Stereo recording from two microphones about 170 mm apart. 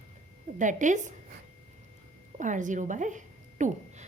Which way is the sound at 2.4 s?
45° right (ahead or behind).